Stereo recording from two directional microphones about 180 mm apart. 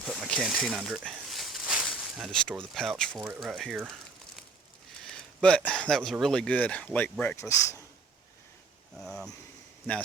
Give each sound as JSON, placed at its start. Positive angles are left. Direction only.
{"t": 0.0, "sound": "a sound", "side_deg": 0}
{"t": 3.2, "sound": "speech", "side_deg": -5}
{"t": 5.0, "sound": "speech", "side_deg": 5}
{"t": 9.0, "sound": "vehicle", "side_deg": 0}